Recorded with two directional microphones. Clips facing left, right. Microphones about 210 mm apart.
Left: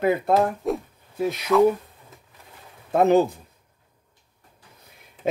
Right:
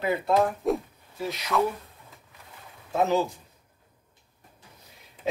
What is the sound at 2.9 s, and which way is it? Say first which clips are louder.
Speech: left 7 dB; 55° left (ahead or behind).